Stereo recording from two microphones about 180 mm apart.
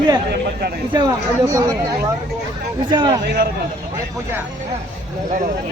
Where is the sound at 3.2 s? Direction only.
60° right (ahead or behind).